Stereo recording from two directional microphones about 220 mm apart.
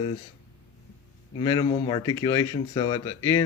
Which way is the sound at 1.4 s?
20° left (ahead or behind).